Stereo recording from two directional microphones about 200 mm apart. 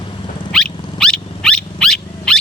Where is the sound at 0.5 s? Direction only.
5° left (ahead or behind).